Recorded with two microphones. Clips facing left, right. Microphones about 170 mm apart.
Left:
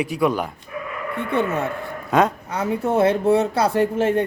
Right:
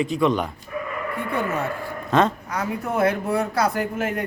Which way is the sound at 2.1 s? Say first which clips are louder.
Left 1 dB; 10° left (ahead or behind).